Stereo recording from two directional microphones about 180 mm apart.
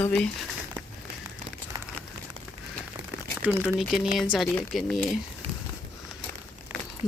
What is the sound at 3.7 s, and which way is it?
Speech, centre (ahead or behind).